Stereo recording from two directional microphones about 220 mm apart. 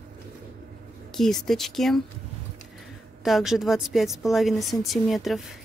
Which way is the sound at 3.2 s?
Centre (ahead or behind).